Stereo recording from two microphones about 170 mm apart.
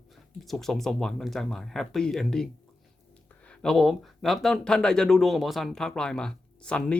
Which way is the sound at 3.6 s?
Centre (ahead or behind).